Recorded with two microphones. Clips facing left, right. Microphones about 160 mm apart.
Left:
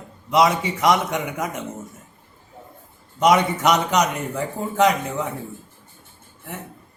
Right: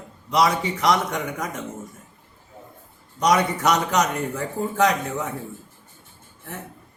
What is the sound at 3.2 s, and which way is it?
Speech, 20° left (ahead or behind).